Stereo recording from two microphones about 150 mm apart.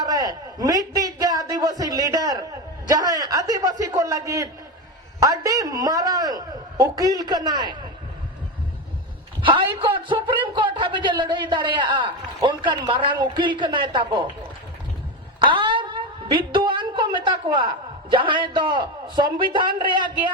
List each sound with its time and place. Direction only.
0.0 s a man's voice: 25° right (ahead or behind)
9.4 s a man's voice: 35° right (ahead or behind)
15.4 s a sound: 35° right (ahead or behind)
18.1 s a man's voice: 35° right (ahead or behind)
19.5 s a man's voice: 70° right (ahead or behind)